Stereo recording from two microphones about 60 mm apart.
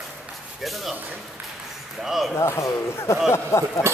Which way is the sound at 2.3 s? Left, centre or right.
Left.